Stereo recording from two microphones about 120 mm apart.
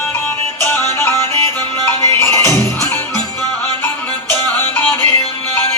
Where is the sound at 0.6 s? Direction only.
20° left (ahead or behind).